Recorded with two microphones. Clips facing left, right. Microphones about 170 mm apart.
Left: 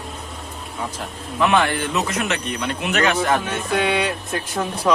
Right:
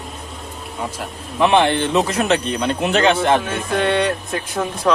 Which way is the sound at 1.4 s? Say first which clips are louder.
Right 4 dB; 25° right (ahead or behind).